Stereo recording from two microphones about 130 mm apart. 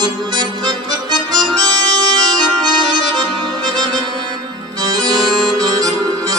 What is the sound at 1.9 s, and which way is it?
Accordion, 30° right (ahead or behind).